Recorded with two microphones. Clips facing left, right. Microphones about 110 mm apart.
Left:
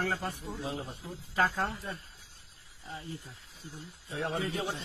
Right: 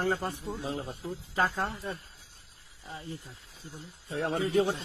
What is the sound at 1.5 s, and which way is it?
Speech, 25° right (ahead or behind).